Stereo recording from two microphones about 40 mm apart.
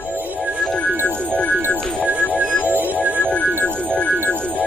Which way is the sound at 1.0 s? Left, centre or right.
Left.